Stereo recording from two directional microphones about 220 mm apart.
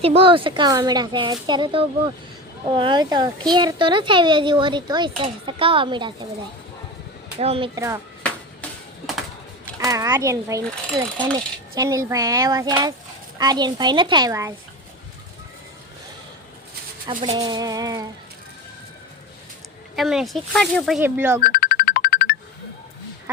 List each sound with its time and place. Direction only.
0.0 s speech: 25° right (ahead or behind)
7.3 s speech: 25° right (ahead or behind)
9.7 s speech: 15° right (ahead or behind)
17.3 s speech: 20° right (ahead or behind)
20.0 s speech: centre (ahead or behind)
21.4 s music: 40° left (ahead or behind)